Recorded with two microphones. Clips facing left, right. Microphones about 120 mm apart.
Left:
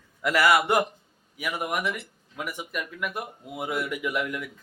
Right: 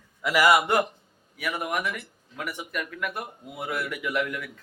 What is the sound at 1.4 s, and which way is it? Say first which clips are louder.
Speech: even; 15° left (ahead or behind).